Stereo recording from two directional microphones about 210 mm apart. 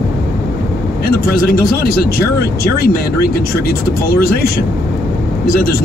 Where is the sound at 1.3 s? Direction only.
45° left (ahead or behind).